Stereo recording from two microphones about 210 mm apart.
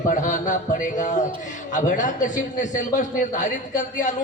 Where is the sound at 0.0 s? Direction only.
35° left (ahead or behind).